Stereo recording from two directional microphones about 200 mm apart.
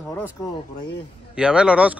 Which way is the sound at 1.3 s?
5° right (ahead or behind).